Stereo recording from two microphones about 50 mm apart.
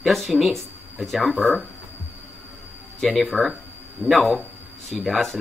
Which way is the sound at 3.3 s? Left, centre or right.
Right.